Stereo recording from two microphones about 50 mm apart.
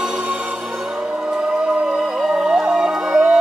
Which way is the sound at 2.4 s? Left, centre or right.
Centre.